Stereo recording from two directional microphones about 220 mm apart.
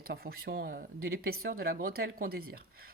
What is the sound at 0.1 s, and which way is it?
Speech, 45° right (ahead or behind).